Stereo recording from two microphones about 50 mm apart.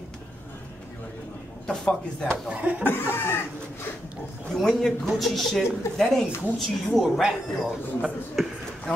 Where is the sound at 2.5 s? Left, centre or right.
Right.